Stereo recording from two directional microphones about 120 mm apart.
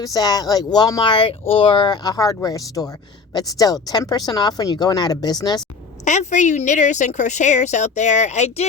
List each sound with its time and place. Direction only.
0.0 s speech: 30° left (ahead or behind)
1.1 s speech: 50° left (ahead or behind)
6.1 s a woman's voice: 85° left; by 8.6 s 65° left (ahead or behind)